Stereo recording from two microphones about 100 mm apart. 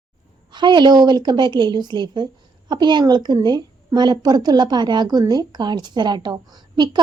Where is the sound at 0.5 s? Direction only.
50° right (ahead or behind).